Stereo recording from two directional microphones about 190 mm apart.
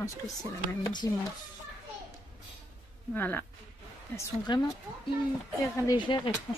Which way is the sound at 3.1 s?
10° left (ahead or behind).